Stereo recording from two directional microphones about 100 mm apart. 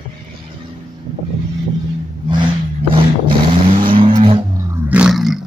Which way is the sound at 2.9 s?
55° right (ahead or behind).